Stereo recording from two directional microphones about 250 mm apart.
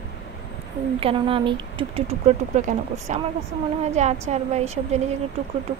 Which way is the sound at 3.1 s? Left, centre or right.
Right.